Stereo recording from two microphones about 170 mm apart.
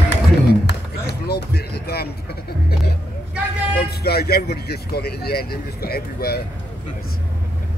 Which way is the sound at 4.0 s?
65° left (ahead or behind).